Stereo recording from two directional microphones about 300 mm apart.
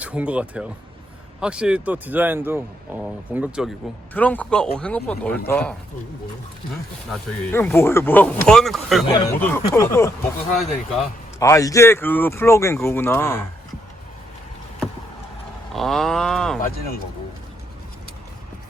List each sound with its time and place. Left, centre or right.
0.0 s speech: centre
7.1 s speech: centre
11.3 s speech: centre
15.7 s speech: centre
16.6 s speech: left